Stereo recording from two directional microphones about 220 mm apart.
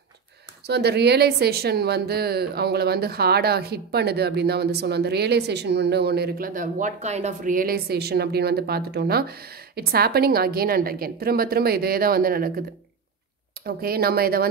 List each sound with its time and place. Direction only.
0.7 s speech: 50° right (ahead or behind)
13.7 s speech: 45° right (ahead or behind)